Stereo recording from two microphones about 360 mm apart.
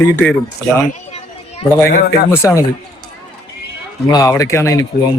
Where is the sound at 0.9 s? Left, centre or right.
Centre.